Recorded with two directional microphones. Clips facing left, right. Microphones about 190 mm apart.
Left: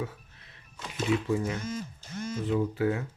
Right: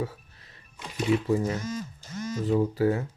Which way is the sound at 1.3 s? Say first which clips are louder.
Right 3 dB; 40° right (ahead or behind).